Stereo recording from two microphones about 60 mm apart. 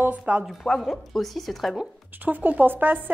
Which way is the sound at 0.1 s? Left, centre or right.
Right.